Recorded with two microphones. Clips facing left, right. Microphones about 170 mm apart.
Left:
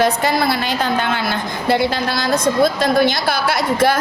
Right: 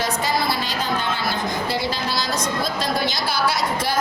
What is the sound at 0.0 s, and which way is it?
Speech, 60° left (ahead or behind).